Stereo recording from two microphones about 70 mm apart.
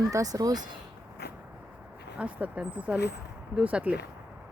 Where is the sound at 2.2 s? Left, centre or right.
Centre.